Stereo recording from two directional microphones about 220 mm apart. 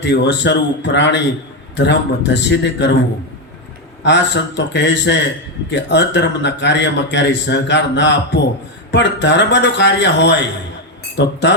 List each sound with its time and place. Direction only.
0.0 s a man's voice: 50° left (ahead or behind)
4.0 s a man's voice: 55° left (ahead or behind)